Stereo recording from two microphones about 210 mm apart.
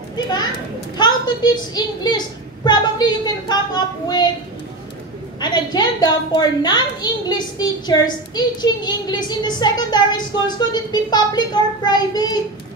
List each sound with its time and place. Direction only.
0.1 s a child's voice: 20° left (ahead or behind)
5.4 s a woman's voice: 20° left (ahead or behind)